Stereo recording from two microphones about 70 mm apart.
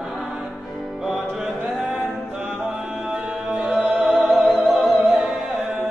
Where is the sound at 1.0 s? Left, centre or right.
Centre.